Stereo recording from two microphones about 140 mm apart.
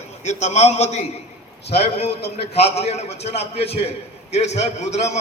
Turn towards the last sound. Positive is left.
turn(degrees=50)  # may be behind; listen again after turning